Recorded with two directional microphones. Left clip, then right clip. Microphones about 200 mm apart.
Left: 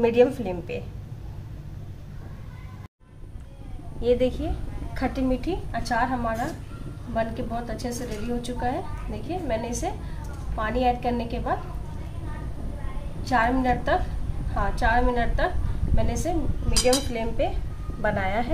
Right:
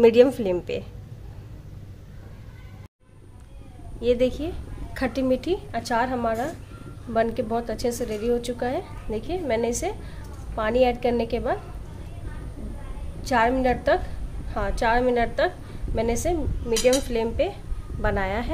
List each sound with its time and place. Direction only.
0.0 s a woman's voice: 45° right (ahead or behind)
4.0 s speech: 30° right (ahead or behind)
4.9 s a woman's voice: 40° right (ahead or behind)
13.2 s a woman's voice: 55° right (ahead or behind)
18.0 s speech: 30° right (ahead or behind)